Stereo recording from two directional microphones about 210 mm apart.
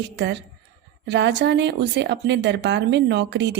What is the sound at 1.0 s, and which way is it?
Speech, 55° right (ahead or behind).